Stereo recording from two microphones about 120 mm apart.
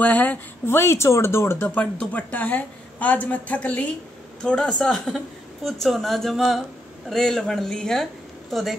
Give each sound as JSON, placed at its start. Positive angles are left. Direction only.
{"t": 0.0, "sound": "a woman's voice", "side_deg": 15}